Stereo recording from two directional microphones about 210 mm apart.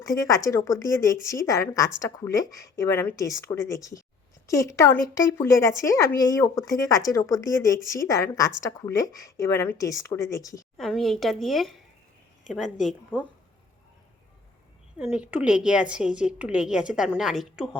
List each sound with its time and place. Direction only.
0.0 s speech: 15° left (ahead or behind)
10.8 s a woman's voice: centre (ahead or behind)
14.9 s a woman's voice: 5° right (ahead or behind)